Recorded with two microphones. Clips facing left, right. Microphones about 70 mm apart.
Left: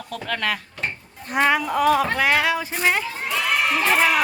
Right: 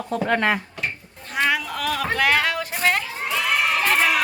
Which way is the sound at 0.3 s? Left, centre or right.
Right.